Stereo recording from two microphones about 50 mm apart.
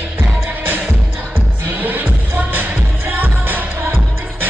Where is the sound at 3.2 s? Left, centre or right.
Right.